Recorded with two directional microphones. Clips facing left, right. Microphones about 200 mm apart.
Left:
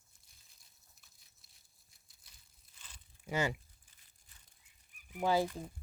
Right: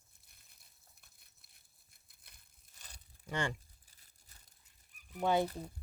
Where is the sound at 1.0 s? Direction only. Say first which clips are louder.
Right 1 dB; 55° right (ahead or behind).